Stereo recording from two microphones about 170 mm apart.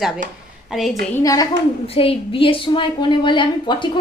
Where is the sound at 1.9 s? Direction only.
30° left (ahead or behind).